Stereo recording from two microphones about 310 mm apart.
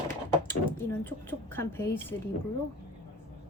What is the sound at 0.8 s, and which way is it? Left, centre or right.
Speech, centre.